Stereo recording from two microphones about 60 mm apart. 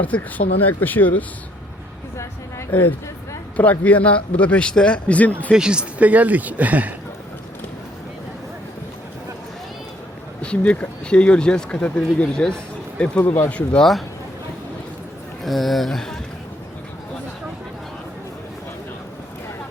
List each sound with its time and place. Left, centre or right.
0.0 s speech: left
2.7 s speech: left
5.5 s speech: centre
6.0 s speech: right
10.4 s speech: centre
15.4 s speech: centre